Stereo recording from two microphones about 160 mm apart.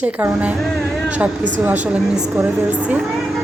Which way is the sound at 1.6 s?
10° right (ahead or behind).